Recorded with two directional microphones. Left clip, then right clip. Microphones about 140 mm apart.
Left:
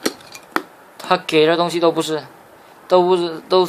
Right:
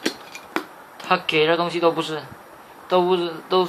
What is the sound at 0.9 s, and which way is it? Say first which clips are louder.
Speech: left 4 dB; 90° left.